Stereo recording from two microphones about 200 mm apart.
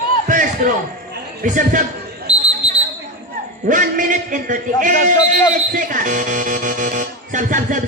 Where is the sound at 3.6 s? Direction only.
40° right (ahead or behind).